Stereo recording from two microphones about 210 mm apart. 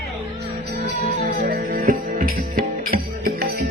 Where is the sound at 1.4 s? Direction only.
45° right (ahead or behind).